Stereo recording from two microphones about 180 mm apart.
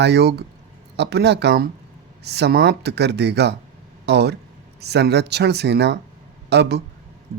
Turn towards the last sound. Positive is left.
turn(degrees=-65)  # may be behind; listen again after turning